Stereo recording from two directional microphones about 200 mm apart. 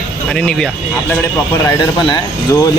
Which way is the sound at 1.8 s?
20° left (ahead or behind).